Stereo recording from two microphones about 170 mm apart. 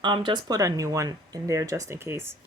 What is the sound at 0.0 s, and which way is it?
Speech, 25° right (ahead or behind).